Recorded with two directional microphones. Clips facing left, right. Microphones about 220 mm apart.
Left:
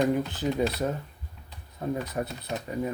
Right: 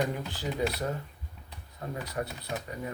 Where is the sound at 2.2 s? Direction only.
25° left (ahead or behind).